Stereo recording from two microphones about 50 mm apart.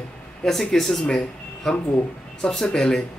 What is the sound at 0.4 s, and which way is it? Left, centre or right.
Speech, centre.